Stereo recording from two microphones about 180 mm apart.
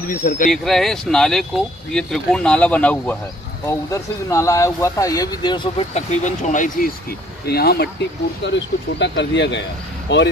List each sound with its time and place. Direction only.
0.1 s speech: 50° left (ahead or behind)
0.5 s speech: centre (ahead or behind); by 6.9 s 45° left (ahead or behind)
7.4 s speech: 60° left (ahead or behind)
8.5 s speech: 75° left (ahead or behind)